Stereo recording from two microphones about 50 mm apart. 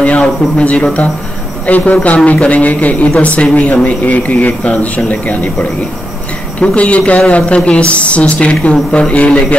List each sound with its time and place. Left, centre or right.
0.0 s speech: left